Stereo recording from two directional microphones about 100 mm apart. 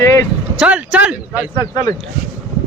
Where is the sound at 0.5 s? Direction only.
10° right (ahead or behind).